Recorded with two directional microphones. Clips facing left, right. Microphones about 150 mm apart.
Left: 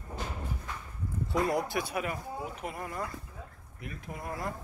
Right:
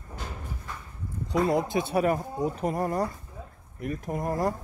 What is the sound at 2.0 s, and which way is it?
Speech, 40° right (ahead or behind).